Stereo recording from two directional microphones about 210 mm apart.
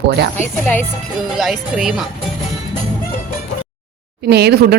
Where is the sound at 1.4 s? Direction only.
Centre (ahead or behind).